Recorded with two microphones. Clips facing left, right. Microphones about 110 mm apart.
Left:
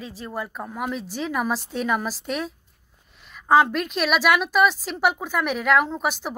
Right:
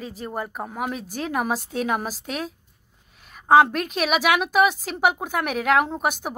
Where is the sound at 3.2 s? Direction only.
50° right (ahead or behind).